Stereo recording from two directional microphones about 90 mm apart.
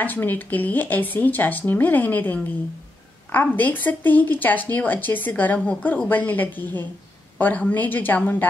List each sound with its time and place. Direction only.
0.0 s speech: 20° left (ahead or behind)